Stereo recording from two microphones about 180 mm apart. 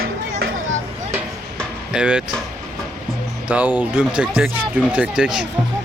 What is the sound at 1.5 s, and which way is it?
Music, 5° right (ahead or behind).